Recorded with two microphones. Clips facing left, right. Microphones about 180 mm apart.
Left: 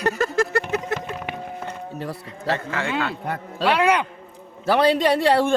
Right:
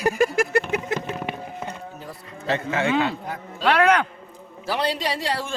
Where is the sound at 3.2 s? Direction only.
65° left (ahead or behind).